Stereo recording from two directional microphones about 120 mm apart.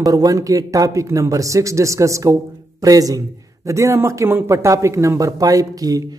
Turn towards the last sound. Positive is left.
turn(degrees=-30)  # may be behind; listen again after turning